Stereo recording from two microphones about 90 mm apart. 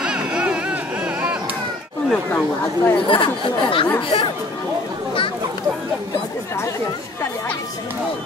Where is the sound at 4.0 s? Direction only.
60° left (ahead or behind).